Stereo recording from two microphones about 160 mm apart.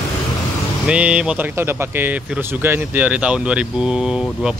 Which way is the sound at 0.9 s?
5° right (ahead or behind).